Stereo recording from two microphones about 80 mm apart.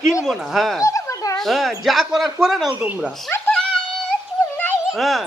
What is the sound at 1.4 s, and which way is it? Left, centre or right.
Speech, centre.